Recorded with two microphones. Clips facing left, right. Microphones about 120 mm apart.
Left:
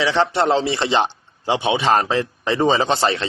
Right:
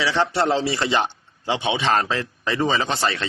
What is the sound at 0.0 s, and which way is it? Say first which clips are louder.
A man's voice: left 3 dB; 20° left (ahead or behind).